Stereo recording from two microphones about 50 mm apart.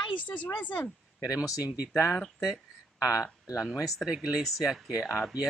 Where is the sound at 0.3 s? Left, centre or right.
Left.